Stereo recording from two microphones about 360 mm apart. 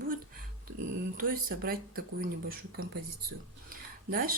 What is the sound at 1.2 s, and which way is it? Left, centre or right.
Speech, right.